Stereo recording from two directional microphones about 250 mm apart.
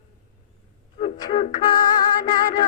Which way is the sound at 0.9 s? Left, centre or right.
Left.